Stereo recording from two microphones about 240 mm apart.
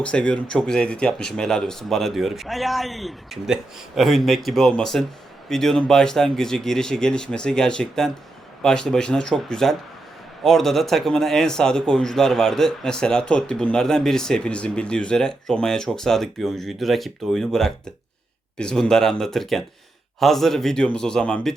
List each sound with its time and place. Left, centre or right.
0.0 s speech: centre